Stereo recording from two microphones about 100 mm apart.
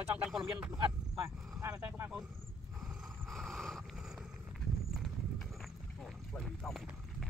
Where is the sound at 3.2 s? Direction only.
Centre (ahead or behind).